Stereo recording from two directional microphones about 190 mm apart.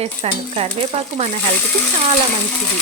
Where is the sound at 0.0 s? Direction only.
35° right (ahead or behind).